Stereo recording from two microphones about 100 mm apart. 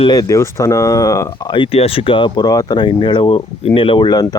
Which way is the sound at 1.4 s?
55° left (ahead or behind).